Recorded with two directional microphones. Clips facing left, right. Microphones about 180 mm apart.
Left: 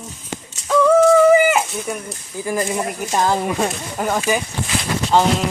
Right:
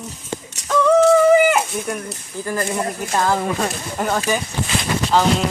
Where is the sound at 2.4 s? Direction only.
15° left (ahead or behind).